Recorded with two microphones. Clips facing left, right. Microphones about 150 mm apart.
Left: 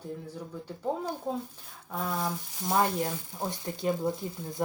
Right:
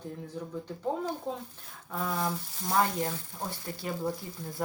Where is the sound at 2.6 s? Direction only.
15° left (ahead or behind).